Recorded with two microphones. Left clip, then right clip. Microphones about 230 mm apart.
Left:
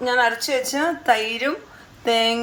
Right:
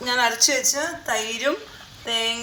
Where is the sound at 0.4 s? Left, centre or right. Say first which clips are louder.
Even; left.